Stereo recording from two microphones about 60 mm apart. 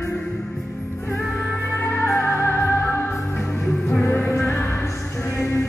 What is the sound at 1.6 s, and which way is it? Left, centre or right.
Music, left.